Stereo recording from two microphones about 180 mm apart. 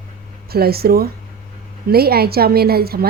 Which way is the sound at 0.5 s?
60° right (ahead or behind).